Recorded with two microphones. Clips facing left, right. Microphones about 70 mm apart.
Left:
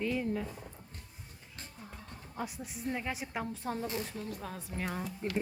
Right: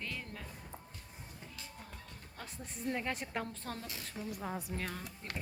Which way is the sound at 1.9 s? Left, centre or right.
Centre.